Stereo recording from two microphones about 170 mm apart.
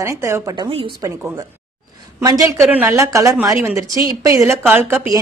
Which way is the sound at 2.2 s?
20° right (ahead or behind).